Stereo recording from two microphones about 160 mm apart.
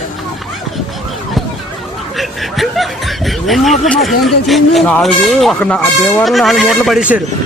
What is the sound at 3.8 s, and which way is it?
Speech, centre (ahead or behind).